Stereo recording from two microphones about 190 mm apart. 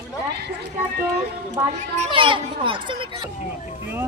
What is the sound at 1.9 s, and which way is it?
A child's voice, 30° right (ahead or behind).